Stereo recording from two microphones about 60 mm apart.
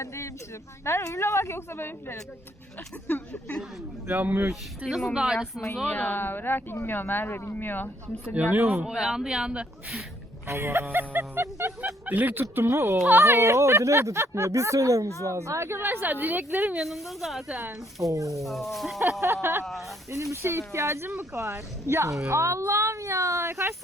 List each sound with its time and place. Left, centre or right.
0.0 s a woman's voice: left
4.0 s a woman's voice: right
4.9 s speech: centre
5.1 s a woman's voice: centre
5.9 s speech: left
8.3 s speech: right
8.5 s a woman's voice: right
8.8 s a woman's voice: centre
10.4 s a woman's voice: right
16.8 s speech: centre
18.0 s speech: right
18.4 s speech: centre
19.2 s speech: right